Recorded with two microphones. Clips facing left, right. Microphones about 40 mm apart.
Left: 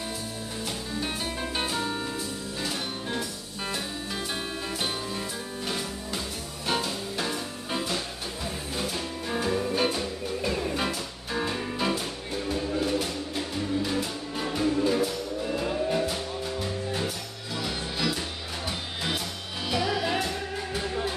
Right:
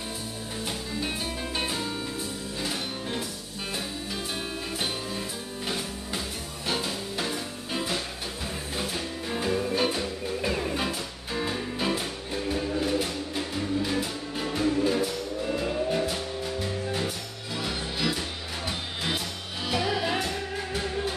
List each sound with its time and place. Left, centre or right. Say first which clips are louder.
1.0 s music: left 1 dB; centre
2.6 s music: even; centre
9.4 s music: even; centre
9.8 s music: even; centre
11.9 s music: even; centre
14.5 s music: even; centre